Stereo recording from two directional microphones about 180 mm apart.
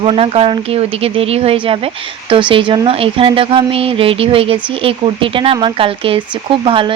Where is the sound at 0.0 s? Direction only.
30° right (ahead or behind).